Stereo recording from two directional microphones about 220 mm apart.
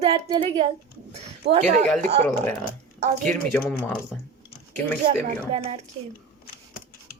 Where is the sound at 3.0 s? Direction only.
35° right (ahead or behind).